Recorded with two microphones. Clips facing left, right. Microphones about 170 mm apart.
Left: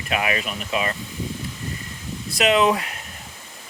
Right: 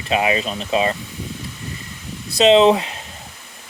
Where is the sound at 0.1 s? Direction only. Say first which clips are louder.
Right 5 dB; 25° right (ahead or behind).